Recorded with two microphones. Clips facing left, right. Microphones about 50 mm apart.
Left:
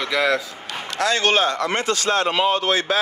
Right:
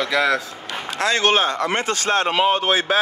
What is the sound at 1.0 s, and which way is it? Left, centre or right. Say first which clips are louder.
A man's voice: even; right.